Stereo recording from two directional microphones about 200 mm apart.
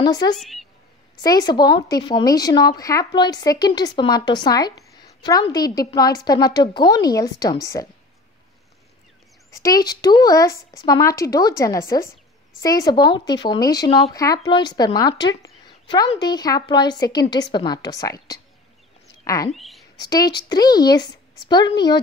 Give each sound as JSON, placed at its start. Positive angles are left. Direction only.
{"t": 0.0, "sound": "speech", "side_deg": 20}
{"t": 0.4, "sound": "a woman's voice", "side_deg": 0}
{"t": 1.2, "sound": "speech", "side_deg": 20}
{"t": 9.5, "sound": "speech", "side_deg": 15}
{"t": 19.5, "sound": "a sound", "side_deg": 0}
{"t": 20.0, "sound": "speech", "side_deg": 20}